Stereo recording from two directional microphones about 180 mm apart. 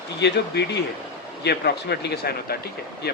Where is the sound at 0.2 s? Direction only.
70° left (ahead or behind).